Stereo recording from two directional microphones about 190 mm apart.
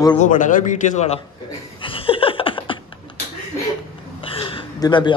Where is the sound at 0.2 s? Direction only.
40° left (ahead or behind).